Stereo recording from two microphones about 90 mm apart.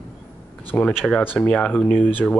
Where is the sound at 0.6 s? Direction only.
15° left (ahead or behind).